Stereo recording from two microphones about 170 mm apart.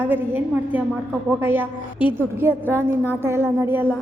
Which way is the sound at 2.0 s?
30° left (ahead or behind).